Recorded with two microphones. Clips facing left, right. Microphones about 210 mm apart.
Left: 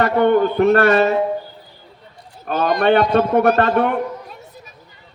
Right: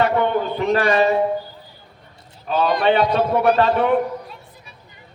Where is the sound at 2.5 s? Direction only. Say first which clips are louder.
Left 2 dB; 45° left (ahead or behind).